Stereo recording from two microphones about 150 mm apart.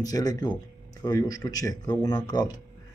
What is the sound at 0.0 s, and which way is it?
Speech, 25° left (ahead or behind).